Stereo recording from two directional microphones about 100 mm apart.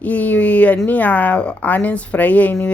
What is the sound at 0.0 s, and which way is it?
Speech, 15° left (ahead or behind).